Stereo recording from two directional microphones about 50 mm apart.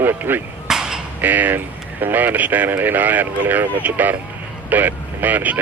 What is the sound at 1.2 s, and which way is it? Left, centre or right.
A man's voice, right.